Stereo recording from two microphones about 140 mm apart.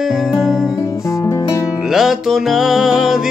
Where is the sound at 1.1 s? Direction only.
20° left (ahead or behind).